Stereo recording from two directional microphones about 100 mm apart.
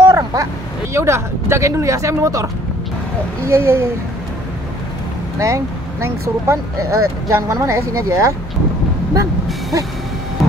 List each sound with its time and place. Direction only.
0.0 s vehicle: 30° right (ahead or behind)
0.9 s speech: 30° right (ahead or behind)
5.4 s speech: 30° right (ahead or behind)